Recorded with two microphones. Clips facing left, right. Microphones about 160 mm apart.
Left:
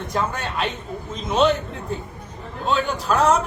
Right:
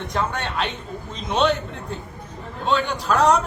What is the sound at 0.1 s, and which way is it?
A man's voice, centre (ahead or behind).